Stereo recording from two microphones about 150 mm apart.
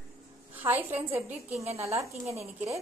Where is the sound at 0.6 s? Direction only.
15° right (ahead or behind).